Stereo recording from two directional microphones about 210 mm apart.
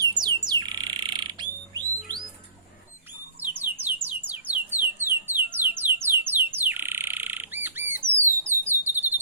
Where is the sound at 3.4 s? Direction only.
10° right (ahead or behind).